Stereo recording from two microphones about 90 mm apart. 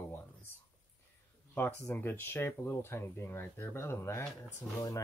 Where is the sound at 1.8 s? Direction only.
20° left (ahead or behind).